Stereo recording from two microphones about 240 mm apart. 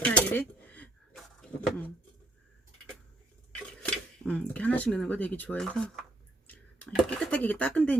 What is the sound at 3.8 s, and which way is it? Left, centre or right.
Speech, centre.